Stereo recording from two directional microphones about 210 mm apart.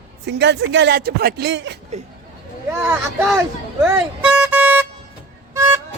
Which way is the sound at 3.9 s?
5° right (ahead or behind).